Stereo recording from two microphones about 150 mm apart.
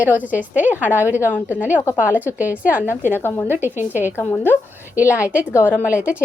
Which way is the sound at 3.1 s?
15° left (ahead or behind).